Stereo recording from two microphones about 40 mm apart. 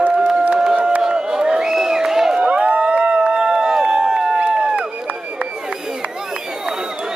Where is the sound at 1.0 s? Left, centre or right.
Centre.